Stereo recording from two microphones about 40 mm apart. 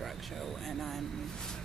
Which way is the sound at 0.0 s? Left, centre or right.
Centre.